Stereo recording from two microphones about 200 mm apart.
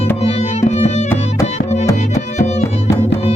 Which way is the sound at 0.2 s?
30° left (ahead or behind).